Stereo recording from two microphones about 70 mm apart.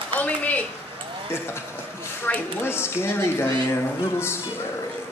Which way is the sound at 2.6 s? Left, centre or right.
Left.